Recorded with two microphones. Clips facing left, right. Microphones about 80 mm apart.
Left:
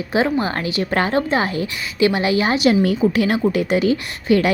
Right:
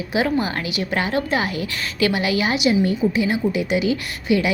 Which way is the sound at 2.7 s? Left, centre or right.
Left.